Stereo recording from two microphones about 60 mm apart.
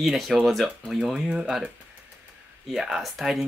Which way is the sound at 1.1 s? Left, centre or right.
Centre.